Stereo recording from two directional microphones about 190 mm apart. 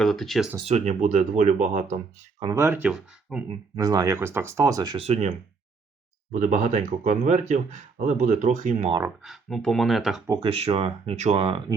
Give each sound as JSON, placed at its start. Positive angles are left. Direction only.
{"t": 0.0, "sound": "speech", "side_deg": 0}
{"t": 0.6, "sound": "speech", "side_deg": -35}
{"t": 2.4, "sound": "speech", "side_deg": -15}
{"t": 3.5, "sound": "speech", "side_deg": -20}
{"t": 6.3, "sound": "speech", "side_deg": -40}
{"t": 9.0, "sound": "speech", "side_deg": 0}
{"t": 10.2, "sound": "speech", "side_deg": -20}
{"t": 10.5, "sound": "speech", "side_deg": -30}